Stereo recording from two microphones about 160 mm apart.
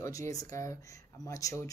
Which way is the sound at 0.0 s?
20° left (ahead or behind).